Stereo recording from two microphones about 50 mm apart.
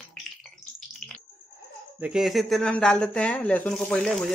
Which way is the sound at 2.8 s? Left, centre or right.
Centre.